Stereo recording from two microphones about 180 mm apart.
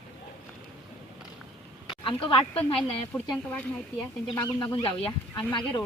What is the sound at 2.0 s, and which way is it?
Speech, 30° left (ahead or behind).